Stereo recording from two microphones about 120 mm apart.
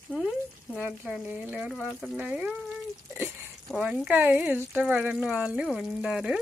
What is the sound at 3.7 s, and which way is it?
Speech, centre (ahead or behind).